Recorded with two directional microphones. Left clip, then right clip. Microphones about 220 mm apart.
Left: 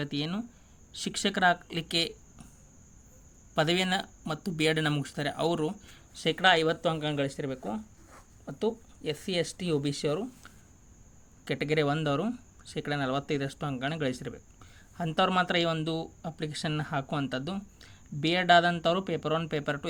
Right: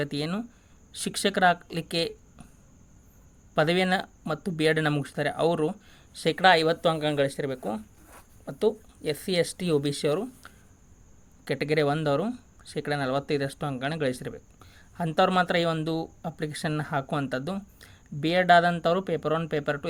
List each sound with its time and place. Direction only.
0.0 s speech: 20° right (ahead or behind)
3.5 s speech: 15° right (ahead or behind)